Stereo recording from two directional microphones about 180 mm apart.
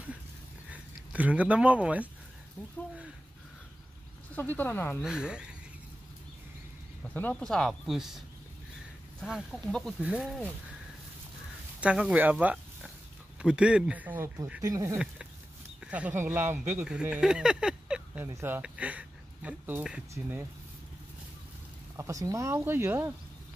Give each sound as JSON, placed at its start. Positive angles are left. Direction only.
{"t": 0.7, "sound": "speech", "side_deg": -10}
{"t": 4.4, "sound": "speech", "side_deg": 10}
{"t": 5.0, "sound": "speech", "side_deg": -5}
{"t": 7.2, "sound": "speech", "side_deg": 5}
{"t": 9.2, "sound": "speech", "side_deg": -5}
{"t": 11.8, "sound": "speech", "side_deg": -5}
{"t": 15.8, "sound": "speech", "side_deg": -5}
{"t": 21.9, "sound": "speech", "side_deg": -15}